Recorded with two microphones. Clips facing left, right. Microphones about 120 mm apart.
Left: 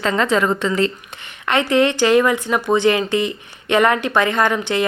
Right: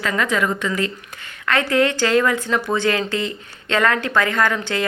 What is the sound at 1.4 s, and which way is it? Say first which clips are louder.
Speech: left 2 dB; 20° left (ahead or behind).